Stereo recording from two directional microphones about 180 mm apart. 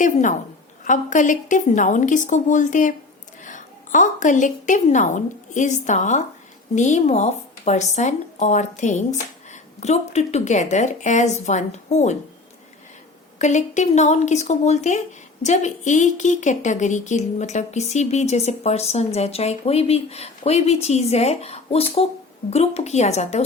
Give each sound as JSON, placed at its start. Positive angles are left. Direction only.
{"t": 0.0, "sound": "a woman's voice", "side_deg": 45}
{"t": 13.4, "sound": "a woman's voice", "side_deg": 40}